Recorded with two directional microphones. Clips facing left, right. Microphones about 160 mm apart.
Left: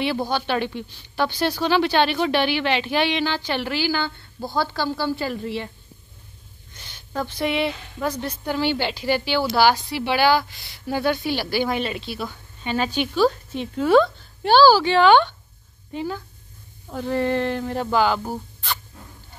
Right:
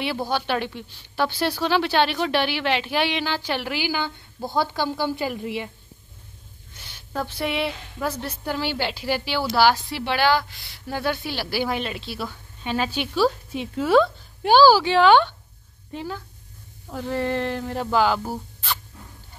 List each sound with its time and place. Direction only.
0.0 s a woman's voice: 5° right (ahead or behind)
6.7 s a woman's voice: 5° right (ahead or behind)